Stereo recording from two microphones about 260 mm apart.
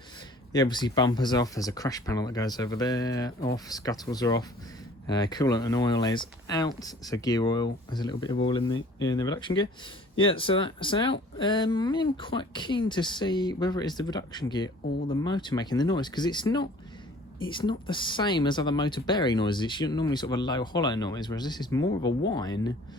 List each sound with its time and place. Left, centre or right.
0.5 s speech: centre